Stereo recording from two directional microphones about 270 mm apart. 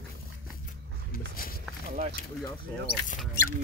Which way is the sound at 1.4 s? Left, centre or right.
Left.